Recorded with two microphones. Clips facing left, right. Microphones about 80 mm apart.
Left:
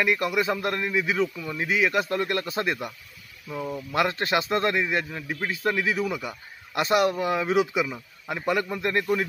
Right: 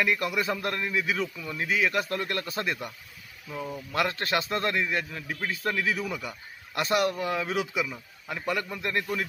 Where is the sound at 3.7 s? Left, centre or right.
Left; by 6.3 s centre.